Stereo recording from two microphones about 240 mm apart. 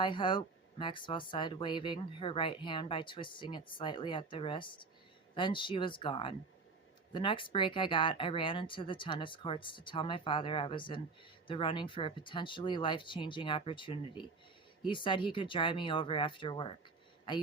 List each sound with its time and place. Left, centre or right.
0.0 s speech: left